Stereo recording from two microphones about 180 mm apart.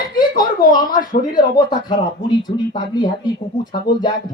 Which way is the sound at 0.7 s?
25° left (ahead or behind).